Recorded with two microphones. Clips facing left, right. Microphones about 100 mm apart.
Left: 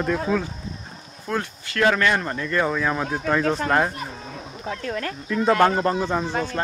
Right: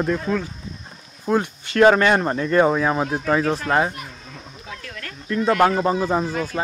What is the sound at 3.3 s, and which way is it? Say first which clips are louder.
Speech: right 1 dB; 5° right (ahead or behind).